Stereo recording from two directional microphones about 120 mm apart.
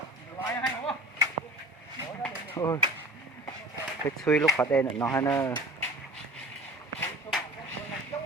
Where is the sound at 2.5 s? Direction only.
30° left (ahead or behind).